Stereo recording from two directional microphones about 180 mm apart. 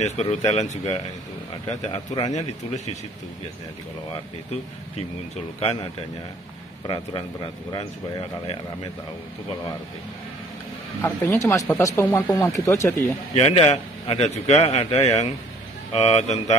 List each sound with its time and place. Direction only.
0.0 s a man's voice: 35° left (ahead or behind)
1.9 s speech: 25° left (ahead or behind)
2.3 s a man's voice: 40° left (ahead or behind)
5.6 s a man's voice: 35° left (ahead or behind)
11.0 s speech: 15° left (ahead or behind)
13.3 s a man's voice: 30° left (ahead or behind)